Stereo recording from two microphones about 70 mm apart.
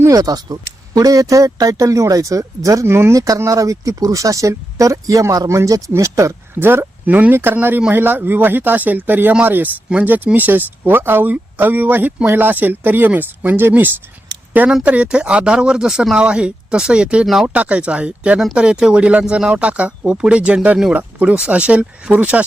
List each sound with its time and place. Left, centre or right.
0.0 s speech: right
2.8 s speech: right
3.2 s speech: right
6.5 s speech: right
14.7 s speech: centre
17.5 s speech: centre